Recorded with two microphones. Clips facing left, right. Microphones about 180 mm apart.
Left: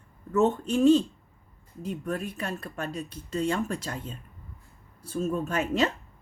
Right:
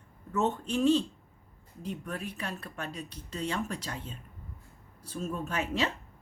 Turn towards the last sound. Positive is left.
turn(degrees=45)  # may be behind; listen again after turning